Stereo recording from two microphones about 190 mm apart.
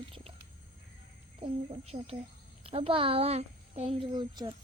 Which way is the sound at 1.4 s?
30° right (ahead or behind).